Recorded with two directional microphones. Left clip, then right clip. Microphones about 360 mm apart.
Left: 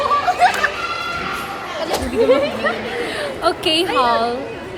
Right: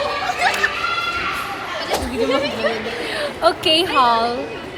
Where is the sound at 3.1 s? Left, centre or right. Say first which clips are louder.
Right 3 dB; centre.